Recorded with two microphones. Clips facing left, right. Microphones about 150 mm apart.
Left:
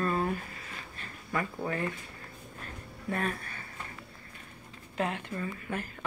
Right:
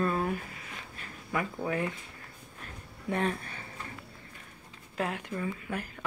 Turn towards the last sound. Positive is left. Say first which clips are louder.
# even
turn(degrees=-5)  # may be behind; listen again after turning